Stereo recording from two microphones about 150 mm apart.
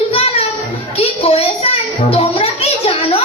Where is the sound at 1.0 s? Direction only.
40° left (ahead or behind).